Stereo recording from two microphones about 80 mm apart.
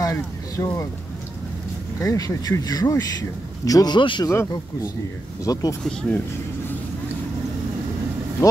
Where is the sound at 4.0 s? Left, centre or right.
Left.